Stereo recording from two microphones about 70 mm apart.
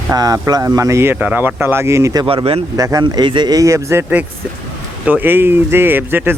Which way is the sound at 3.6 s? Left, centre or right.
Right.